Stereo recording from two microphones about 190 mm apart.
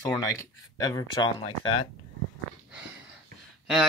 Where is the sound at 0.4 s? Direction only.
20° left (ahead or behind).